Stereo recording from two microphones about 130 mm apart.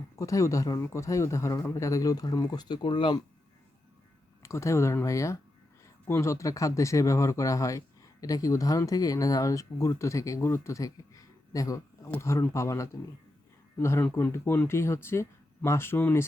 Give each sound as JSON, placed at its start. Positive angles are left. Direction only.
{"t": 0.2, "sound": "speech", "side_deg": 25}
{"t": 4.4, "sound": "speech", "side_deg": 20}